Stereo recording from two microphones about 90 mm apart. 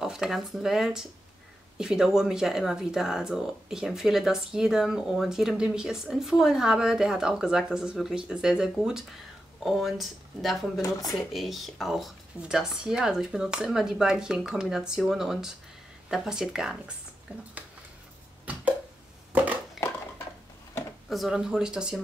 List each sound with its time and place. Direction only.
0.0 s speech: 5° right (ahead or behind)
10.8 s speech: 40° left (ahead or behind)
11.3 s speech: centre (ahead or behind)
18.4 s a sound: 15° right (ahead or behind)
19.3 s crushing: 15° right (ahead or behind)
19.8 s dishes: 25° left (ahead or behind)
21.1 s speech: 5° right (ahead or behind)